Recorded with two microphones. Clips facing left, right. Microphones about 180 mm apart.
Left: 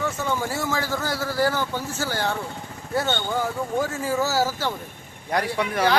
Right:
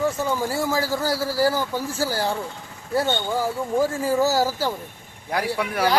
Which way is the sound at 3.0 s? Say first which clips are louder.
Right 2 dB; 10° right (ahead or behind).